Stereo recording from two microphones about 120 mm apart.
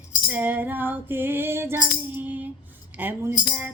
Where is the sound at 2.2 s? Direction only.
15° right (ahead or behind).